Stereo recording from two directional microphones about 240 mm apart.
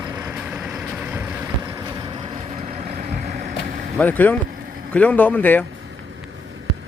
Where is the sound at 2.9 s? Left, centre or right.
Right.